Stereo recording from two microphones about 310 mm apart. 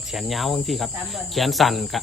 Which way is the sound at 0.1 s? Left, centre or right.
Centre.